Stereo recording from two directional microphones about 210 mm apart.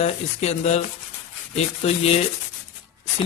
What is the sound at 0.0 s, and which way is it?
A man's voice, 30° left (ahead or behind).